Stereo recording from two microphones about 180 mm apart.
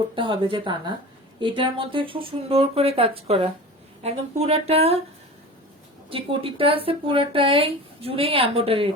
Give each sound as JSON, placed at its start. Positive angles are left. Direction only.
{"t": 0.2, "sound": "speech", "side_deg": -25}
{"t": 6.1, "sound": "speech", "side_deg": -30}